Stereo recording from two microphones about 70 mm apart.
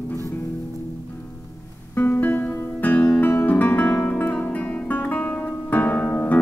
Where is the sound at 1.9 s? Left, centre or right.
Left.